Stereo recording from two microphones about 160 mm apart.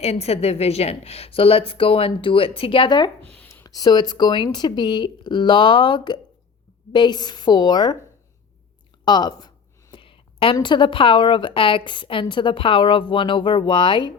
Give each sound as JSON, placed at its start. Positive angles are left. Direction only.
{"t": 0.0, "sound": "speech", "side_deg": 40}
{"t": 9.0, "sound": "speech", "side_deg": 25}